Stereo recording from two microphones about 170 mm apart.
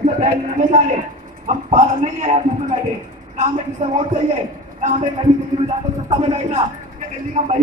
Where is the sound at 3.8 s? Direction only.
50° right (ahead or behind).